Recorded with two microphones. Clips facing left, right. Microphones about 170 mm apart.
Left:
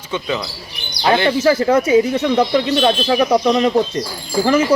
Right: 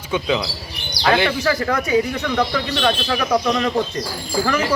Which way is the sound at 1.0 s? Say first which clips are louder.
Left 4 dB; 25° left (ahead or behind).